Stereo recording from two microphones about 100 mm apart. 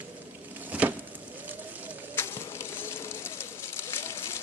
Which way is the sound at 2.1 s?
25° left (ahead or behind).